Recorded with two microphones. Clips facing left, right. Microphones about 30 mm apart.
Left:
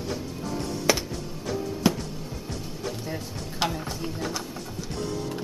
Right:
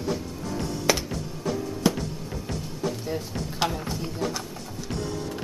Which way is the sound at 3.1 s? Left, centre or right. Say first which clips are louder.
Right 3 dB; centre.